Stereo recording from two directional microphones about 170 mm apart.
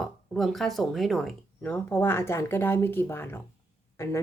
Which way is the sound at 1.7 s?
10° left (ahead or behind).